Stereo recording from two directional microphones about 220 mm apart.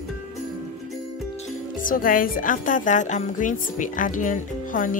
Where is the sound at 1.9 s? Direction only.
40° left (ahead or behind).